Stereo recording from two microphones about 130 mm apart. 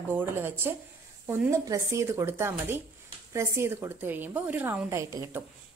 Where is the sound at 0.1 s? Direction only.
15° right (ahead or behind).